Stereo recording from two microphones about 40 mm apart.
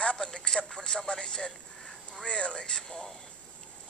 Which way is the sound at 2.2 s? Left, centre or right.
Left.